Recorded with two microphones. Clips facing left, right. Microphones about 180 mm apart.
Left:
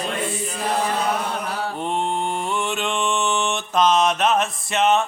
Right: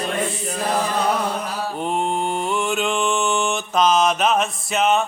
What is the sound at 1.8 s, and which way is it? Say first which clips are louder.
Mantra: right 3 dB; centre (ahead or behind).